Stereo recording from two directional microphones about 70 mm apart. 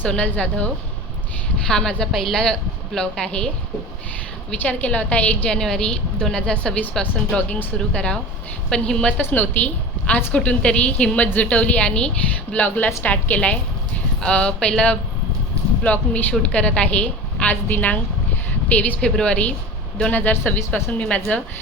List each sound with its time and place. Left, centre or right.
0.0 s a woman's voice: centre
4.6 s a woman's voice: left
5.5 s a woman's voice: centre
9.3 s a woman's voice: left